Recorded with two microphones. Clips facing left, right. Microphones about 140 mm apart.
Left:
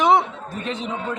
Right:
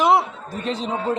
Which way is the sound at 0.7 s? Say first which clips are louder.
Right 4 dB; 35° right (ahead or behind).